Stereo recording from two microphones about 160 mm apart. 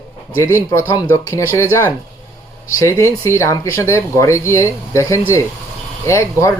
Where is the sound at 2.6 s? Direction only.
15° left (ahead or behind).